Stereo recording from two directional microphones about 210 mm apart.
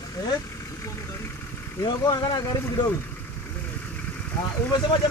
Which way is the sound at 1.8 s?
20° left (ahead or behind).